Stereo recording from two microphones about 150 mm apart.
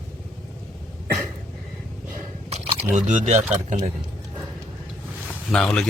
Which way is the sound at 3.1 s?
50° right (ahead or behind).